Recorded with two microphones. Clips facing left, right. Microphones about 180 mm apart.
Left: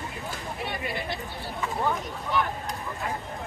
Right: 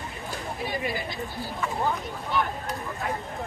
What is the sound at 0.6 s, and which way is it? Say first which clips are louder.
Speech: right 3 dB; 65° left (ahead or behind).